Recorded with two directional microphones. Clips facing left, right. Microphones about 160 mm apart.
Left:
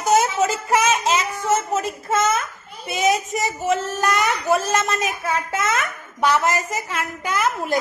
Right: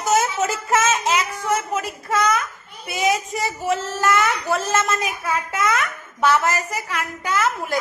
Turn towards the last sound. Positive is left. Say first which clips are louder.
# even
turn(degrees=15)  # may be behind; listen again after turning